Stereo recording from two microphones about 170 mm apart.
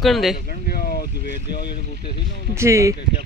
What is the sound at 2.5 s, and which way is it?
Speech, 15° right (ahead or behind).